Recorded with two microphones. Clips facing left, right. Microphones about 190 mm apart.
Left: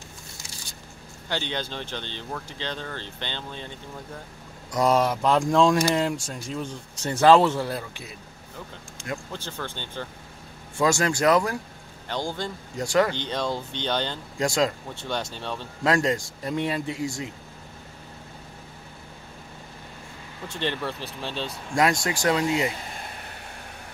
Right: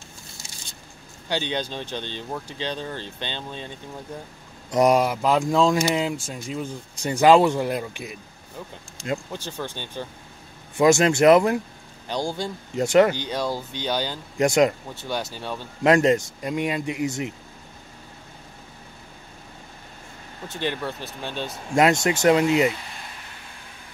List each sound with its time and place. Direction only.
1.3 s speech: 15° right (ahead or behind)
13.2 s speech: 5° right (ahead or behind)
14.4 s speech: 20° right (ahead or behind)
15.0 s speech: 5° right (ahead or behind)
15.8 s speech: 20° right (ahead or behind)
20.5 s speech: 5° right (ahead or behind)
21.5 s speech: 25° right (ahead or behind)
22.7 s a sound: 40° left (ahead or behind)